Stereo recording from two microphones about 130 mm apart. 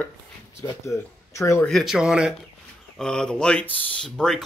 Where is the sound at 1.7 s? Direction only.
Centre (ahead or behind).